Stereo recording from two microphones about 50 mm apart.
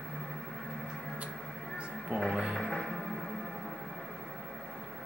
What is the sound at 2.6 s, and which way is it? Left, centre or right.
Music, centre.